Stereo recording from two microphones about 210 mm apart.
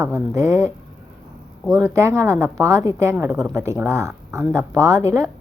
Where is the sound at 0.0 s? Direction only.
15° right (ahead or behind).